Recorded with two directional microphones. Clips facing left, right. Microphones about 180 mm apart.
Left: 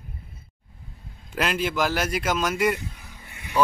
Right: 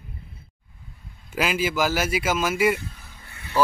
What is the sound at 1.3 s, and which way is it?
A man's voice, 5° right (ahead or behind).